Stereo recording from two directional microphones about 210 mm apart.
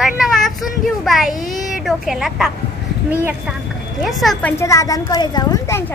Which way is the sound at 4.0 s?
Centre (ahead or behind).